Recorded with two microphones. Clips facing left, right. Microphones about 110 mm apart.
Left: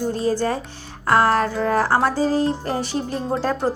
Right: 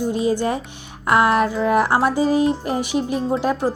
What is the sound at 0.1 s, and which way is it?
A woman's voice, 15° right (ahead or behind).